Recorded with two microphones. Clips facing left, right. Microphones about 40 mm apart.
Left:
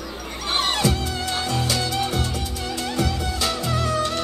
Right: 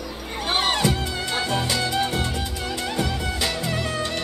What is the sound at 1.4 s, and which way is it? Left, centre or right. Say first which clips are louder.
Music: even; right.